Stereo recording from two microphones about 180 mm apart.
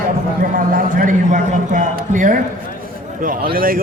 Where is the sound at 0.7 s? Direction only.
50° right (ahead or behind).